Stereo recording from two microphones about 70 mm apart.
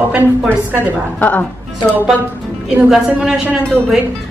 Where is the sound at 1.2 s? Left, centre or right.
Left.